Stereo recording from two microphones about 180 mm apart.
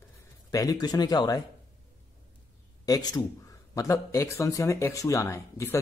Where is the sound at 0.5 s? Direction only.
20° left (ahead or behind).